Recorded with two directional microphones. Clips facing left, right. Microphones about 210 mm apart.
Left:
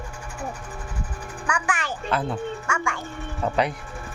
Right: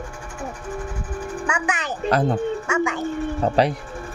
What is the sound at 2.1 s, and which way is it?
Speech, 40° right (ahead or behind).